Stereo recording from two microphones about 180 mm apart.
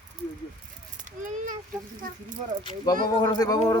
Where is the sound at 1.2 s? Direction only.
45° right (ahead or behind).